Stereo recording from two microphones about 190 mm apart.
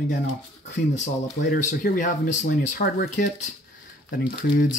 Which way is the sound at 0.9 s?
40° left (ahead or behind).